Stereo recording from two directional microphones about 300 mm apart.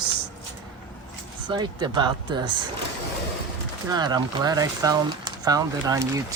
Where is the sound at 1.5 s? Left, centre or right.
Centre.